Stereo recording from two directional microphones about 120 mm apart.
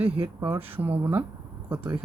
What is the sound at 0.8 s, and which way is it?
Speech, 15° right (ahead or behind).